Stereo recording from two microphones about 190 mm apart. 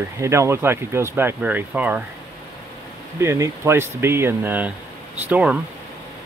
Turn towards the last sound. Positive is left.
turn(degrees=-10)  # may be behind; listen again after turning